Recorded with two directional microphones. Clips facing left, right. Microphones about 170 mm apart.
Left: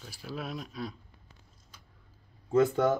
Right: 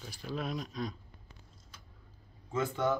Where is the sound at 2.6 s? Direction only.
45° left (ahead or behind).